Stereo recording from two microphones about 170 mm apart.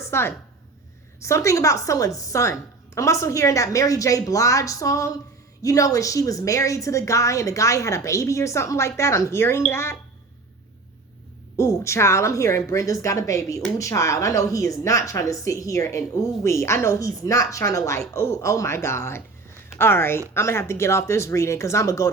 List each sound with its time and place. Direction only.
0.0 s a woman's voice: 15° left (ahead or behind)
11.5 s a woman's voice: 15° left (ahead or behind)